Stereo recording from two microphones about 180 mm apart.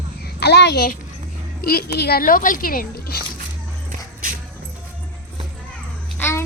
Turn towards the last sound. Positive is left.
turn(degrees=15)  # may be behind; listen again after turning